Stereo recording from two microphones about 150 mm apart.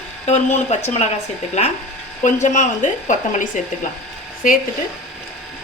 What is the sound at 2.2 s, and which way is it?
Speech, 55° left (ahead or behind).